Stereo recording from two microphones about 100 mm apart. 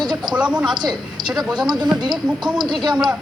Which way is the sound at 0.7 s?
45° right (ahead or behind).